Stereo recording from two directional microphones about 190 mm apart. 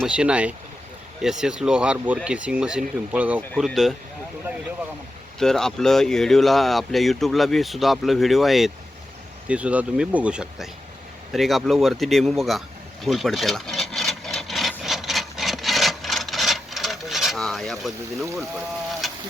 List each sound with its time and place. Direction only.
0.0 s speech: 5° right (ahead or behind)
3.5 s speech: 5° left (ahead or behind)
5.4 s speech: centre (ahead or behind)
13.1 s wood: centre (ahead or behind)
19.0 s a sound: centre (ahead or behind)